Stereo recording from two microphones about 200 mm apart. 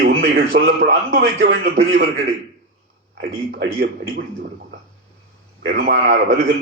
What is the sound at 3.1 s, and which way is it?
Speech, 55° right (ahead or behind).